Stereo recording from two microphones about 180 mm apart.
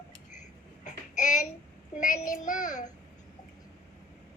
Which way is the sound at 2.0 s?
45° left (ahead or behind).